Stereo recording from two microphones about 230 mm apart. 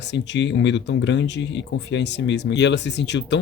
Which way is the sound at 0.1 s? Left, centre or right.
Left.